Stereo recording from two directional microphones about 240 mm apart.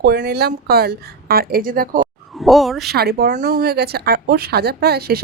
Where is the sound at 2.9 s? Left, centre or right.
Right.